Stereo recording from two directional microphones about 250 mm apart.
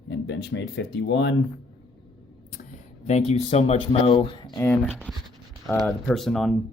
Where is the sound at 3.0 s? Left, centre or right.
Left.